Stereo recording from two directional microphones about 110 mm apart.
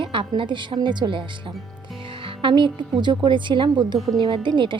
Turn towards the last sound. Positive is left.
turn(degrees=-45)  # may be behind; listen again after turning